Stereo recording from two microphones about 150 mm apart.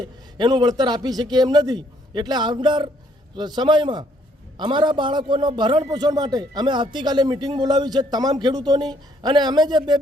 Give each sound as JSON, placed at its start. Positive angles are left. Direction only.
{"t": 0.3, "sound": "a man's voice", "side_deg": -30}